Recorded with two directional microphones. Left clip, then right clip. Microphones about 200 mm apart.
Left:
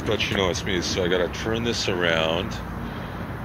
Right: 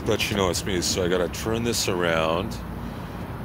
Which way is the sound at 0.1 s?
35° right (ahead or behind).